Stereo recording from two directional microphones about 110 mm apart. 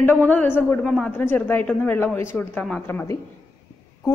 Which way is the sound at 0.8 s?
5° left (ahead or behind).